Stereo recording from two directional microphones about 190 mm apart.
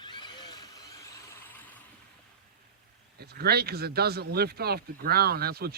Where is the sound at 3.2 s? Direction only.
55° right (ahead or behind).